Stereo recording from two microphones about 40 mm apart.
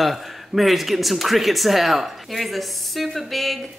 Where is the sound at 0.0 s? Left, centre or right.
Centre.